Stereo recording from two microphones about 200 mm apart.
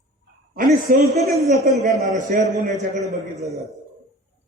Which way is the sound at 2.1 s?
40° right (ahead or behind).